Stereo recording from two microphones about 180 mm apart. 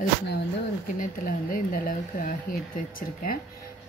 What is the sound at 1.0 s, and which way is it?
Speech, 50° left (ahead or behind).